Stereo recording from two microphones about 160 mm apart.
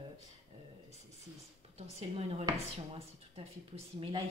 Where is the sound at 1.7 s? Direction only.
40° right (ahead or behind).